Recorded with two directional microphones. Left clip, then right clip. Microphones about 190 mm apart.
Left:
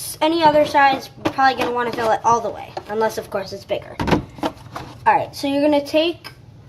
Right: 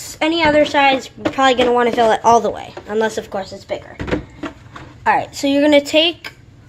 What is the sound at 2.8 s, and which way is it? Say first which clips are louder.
Speech: right 2 dB; 20° right (ahead or behind).